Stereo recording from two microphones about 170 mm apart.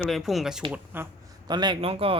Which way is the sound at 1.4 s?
25° right (ahead or behind).